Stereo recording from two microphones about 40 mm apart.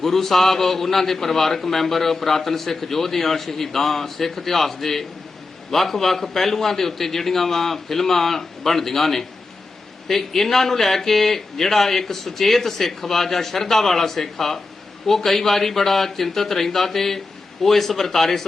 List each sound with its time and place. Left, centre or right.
0.0 s a man's voice: centre